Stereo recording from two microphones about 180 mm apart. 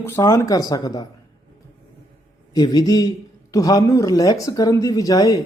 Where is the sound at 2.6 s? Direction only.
20° left (ahead or behind).